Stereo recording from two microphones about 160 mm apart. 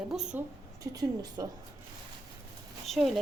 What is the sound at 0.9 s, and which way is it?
Speech, 25° right (ahead or behind).